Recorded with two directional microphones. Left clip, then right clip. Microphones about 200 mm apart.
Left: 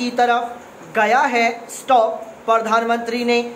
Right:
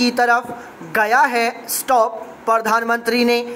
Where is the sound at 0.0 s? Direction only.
25° right (ahead or behind).